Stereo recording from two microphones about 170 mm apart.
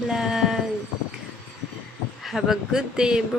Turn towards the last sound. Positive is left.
turn(degrees=-5)  # may be behind; listen again after turning